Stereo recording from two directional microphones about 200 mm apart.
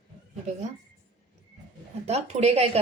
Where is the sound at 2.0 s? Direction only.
30° right (ahead or behind).